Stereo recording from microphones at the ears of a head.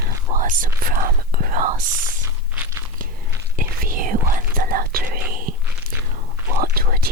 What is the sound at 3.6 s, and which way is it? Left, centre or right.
Whispering, right.